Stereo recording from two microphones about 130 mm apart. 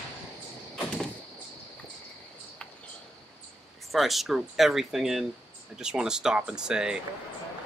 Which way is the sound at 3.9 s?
Centre (ahead or behind).